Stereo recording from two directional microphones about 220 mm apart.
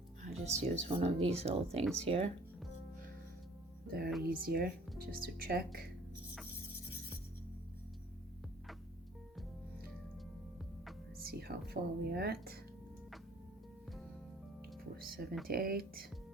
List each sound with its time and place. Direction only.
0.4 s speech: 30° right (ahead or behind)
3.8 s speech: 45° right (ahead or behind)
11.2 s speech: 45° right (ahead or behind)
14.9 s speech: 40° right (ahead or behind)